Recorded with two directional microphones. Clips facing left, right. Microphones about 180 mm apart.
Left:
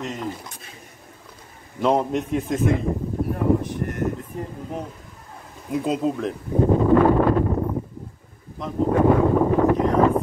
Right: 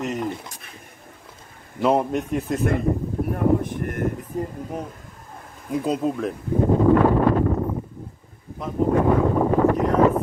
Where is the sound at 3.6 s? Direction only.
55° right (ahead or behind).